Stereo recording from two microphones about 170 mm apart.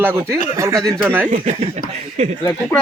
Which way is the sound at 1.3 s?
40° right (ahead or behind).